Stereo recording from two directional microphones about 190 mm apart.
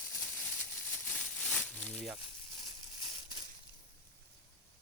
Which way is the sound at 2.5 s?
20° right (ahead or behind).